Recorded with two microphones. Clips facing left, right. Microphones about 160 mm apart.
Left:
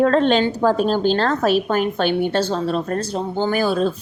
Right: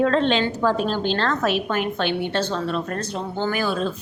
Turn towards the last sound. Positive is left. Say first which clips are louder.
# left 5 dB
turn(degrees=40)  # may be behind; listen again after turning